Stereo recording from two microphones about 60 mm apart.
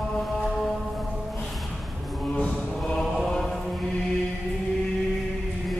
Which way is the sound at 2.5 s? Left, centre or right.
Centre.